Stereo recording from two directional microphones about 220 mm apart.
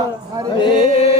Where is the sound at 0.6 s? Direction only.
20° left (ahead or behind).